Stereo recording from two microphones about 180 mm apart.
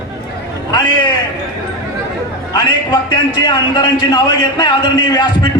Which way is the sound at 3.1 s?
25° left (ahead or behind).